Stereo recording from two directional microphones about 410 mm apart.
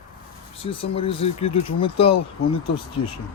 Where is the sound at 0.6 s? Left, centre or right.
Centre.